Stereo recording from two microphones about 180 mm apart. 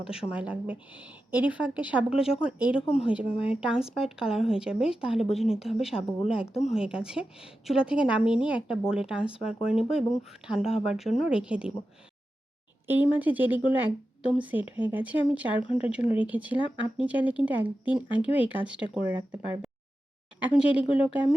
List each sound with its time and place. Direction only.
0.1 s speech: 5° right (ahead or behind)
2.8 s speech: 35° left (ahead or behind)
3.1 s speech: 5° right (ahead or behind)
12.9 s speech: 10° right (ahead or behind)
20.4 s speech: 5° right (ahead or behind)